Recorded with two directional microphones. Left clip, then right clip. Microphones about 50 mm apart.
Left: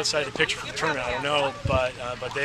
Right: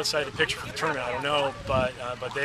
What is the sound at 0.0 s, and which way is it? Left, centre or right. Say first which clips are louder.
A man's voice: left 2 dB; centre.